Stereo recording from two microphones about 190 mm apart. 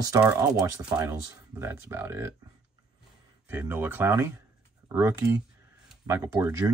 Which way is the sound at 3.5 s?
10° right (ahead or behind).